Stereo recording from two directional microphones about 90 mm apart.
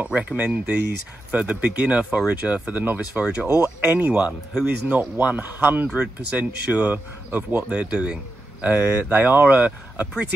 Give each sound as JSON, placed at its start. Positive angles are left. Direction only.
{"t": 0.0, "sound": "speech", "side_deg": -15}